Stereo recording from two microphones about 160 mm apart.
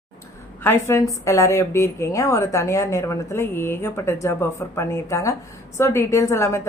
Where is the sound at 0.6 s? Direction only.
15° left (ahead or behind).